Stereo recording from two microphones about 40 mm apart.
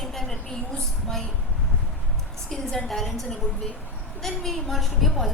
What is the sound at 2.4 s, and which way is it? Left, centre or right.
A woman's voice, centre.